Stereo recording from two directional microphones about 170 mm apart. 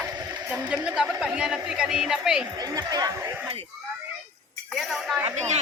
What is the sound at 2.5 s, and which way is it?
Speech, 20° right (ahead or behind).